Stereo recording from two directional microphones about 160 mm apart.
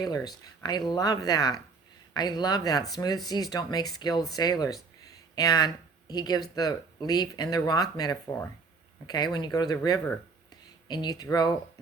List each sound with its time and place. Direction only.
0.0 s speech: 25° left (ahead or behind)